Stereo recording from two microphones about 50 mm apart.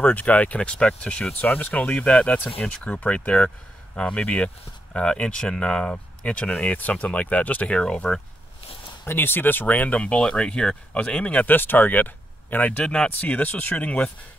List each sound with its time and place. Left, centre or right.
0.0 s speech: left; by 5.9 s centre
6.2 s speech: left
7.7 s speech: centre
9.0 s speech: left
11.4 s speech: left
12.8 s speech: centre
13.2 s speech: left